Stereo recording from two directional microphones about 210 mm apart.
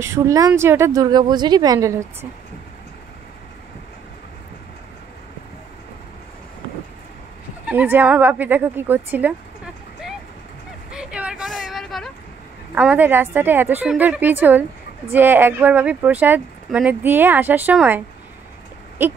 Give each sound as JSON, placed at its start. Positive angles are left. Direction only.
{"t": 0.0, "sound": "speech", "side_deg": -15}
{"t": 7.6, "sound": "speech", "side_deg": -10}
{"t": 10.9, "sound": "vehicle", "side_deg": -5}
{"t": 12.7, "sound": "speech", "side_deg": -5}